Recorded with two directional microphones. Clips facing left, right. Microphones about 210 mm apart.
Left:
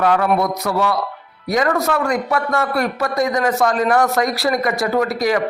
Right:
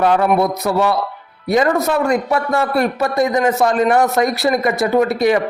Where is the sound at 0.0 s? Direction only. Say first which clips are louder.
Right 2 dB; 25° right (ahead or behind).